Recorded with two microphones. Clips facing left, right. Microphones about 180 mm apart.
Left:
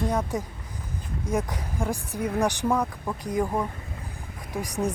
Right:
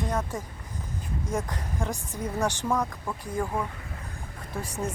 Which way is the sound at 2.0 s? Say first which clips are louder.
Left 4 dB; 65° left (ahead or behind).